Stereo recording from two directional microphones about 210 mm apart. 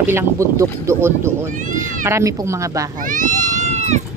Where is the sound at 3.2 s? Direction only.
35° right (ahead or behind).